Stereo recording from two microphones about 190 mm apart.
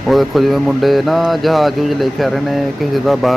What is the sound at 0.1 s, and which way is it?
Speech, centre (ahead or behind).